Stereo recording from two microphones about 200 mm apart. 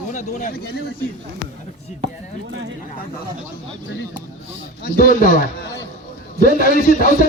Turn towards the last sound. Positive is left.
turn(degrees=45)  # may be behind; listen again after turning